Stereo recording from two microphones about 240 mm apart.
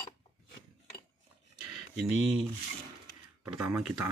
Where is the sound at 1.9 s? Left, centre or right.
Centre.